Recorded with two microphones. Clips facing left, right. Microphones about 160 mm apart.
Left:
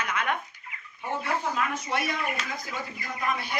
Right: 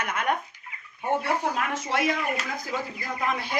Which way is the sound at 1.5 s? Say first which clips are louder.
Right 1 dB; 90° right.